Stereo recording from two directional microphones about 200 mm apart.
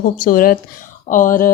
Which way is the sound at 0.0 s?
45° left (ahead or behind).